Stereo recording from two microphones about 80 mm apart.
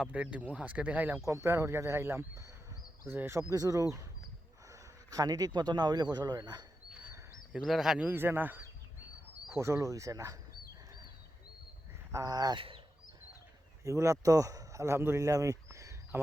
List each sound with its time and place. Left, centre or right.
0.0 s speech: centre
1.2 s speech: right
3.5 s speech: right
7.6 s speech: centre
7.9 s speech: right
9.6 s speech: right
12.1 s speech: right
12.5 s speech: right
13.8 s speech: right